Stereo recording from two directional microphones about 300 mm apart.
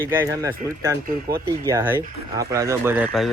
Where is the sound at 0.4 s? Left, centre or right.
Centre.